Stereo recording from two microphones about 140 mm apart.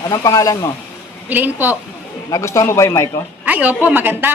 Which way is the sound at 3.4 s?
10° right (ahead or behind).